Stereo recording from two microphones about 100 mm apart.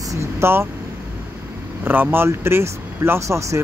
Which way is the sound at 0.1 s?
25° right (ahead or behind).